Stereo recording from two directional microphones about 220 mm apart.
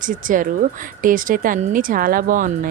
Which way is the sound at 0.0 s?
35° right (ahead or behind).